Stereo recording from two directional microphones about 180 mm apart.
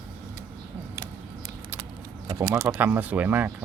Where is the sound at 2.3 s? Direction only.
20° right (ahead or behind).